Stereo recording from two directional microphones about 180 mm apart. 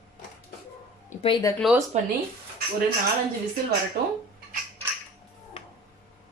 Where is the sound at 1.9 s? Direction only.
40° right (ahead or behind).